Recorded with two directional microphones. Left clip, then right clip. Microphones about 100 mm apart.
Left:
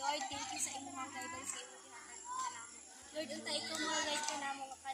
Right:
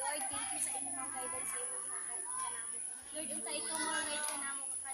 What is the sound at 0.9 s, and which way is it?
Children playing, 20° right (ahead or behind).